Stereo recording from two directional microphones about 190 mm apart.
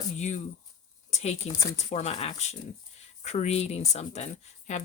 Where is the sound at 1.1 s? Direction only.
35° left (ahead or behind).